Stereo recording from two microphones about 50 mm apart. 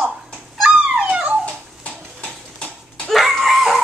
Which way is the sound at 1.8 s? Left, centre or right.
Left.